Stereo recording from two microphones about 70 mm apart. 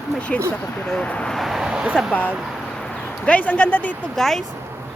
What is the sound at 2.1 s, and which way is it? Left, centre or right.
A man's voice, left.